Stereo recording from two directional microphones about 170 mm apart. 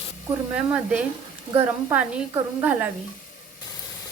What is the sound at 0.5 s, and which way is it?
A woman's voice, 5° right (ahead or behind).